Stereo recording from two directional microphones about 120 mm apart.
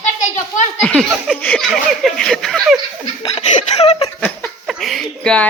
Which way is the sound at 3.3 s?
65° left (ahead or behind).